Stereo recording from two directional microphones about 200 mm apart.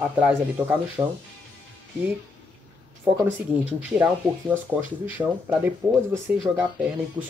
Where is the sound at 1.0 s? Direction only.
20° right (ahead or behind).